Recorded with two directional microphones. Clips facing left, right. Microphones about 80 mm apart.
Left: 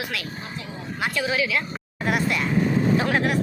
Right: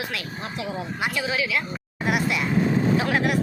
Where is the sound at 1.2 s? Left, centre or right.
Centre.